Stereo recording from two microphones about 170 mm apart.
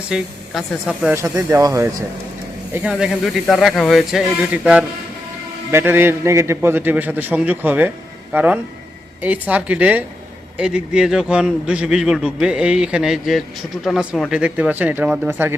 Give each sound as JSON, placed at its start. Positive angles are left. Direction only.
{"t": 0.1, "sound": "a man's voice", "side_deg": -5}
{"t": 1.1, "sound": "a man's voice", "side_deg": -15}
{"t": 2.7, "sound": "a man's voice", "side_deg": -5}